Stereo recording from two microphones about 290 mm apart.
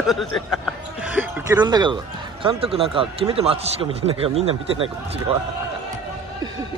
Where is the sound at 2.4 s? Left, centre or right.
Centre.